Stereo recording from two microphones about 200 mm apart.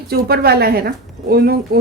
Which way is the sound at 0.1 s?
50° right (ahead or behind).